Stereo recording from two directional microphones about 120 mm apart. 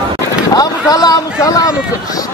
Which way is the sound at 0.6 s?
30° left (ahead or behind).